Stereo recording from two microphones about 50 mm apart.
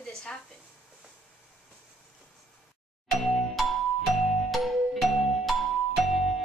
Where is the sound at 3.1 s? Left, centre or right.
Centre.